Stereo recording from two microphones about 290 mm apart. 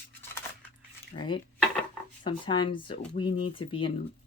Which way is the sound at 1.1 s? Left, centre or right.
Centre.